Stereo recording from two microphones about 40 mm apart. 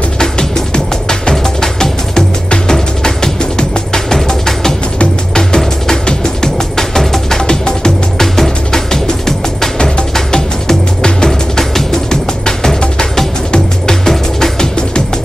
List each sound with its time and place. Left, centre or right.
0.2 s music: centre